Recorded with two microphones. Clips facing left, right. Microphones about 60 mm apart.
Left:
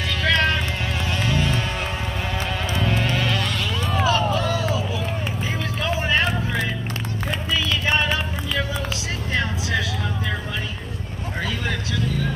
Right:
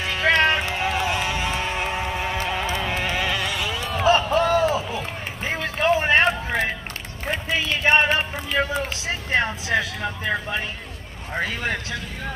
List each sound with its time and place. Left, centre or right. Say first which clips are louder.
0.0 s music: right 2 dB; right
2.7 s a sound: left 2 dB; centre
4.0 s run: right 4 dB; right
5.5 s vehicle: right 7 dB; right
7.2 s a sound: right 1 dB; right
9.3 s vehicle: right 3 dB; right